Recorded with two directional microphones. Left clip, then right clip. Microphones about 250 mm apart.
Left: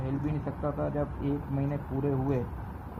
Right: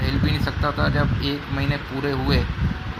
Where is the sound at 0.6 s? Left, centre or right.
Right.